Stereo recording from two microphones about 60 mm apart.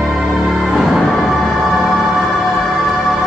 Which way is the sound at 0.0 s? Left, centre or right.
Centre.